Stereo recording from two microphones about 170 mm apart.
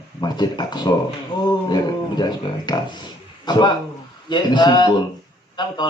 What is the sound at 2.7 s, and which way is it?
A man's voice, 25° left (ahead or behind).